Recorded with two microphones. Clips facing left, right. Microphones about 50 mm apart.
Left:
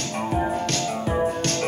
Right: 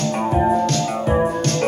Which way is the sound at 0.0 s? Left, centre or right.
Right.